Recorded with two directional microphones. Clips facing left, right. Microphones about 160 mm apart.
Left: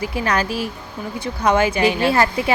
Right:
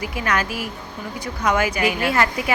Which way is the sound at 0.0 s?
30° left (ahead or behind).